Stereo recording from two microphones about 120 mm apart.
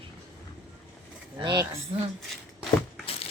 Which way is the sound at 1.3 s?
35° right (ahead or behind).